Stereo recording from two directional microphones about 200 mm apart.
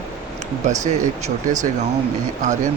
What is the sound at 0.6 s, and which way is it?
Speech, 35° right (ahead or behind).